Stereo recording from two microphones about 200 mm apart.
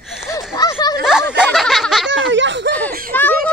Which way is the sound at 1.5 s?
Centre (ahead or behind).